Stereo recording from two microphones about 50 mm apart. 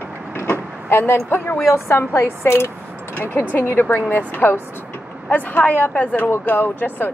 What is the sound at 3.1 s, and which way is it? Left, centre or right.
A woman's voice, left.